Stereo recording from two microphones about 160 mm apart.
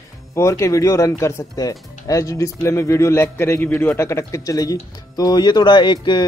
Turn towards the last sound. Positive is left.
turn(degrees=30)  # may be behind; listen again after turning